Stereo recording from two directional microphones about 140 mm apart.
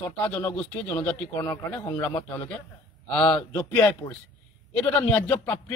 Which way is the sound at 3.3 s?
10° left (ahead or behind).